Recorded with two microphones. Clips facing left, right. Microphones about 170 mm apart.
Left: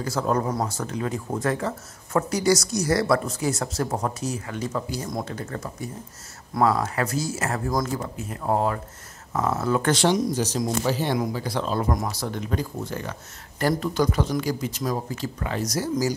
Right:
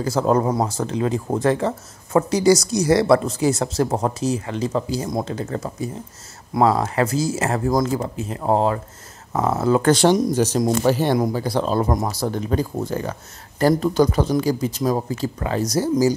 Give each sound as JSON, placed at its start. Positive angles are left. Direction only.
{"t": 0.0, "sound": "speech", "side_deg": -30}
{"t": 11.1, "sound": "speech", "side_deg": -35}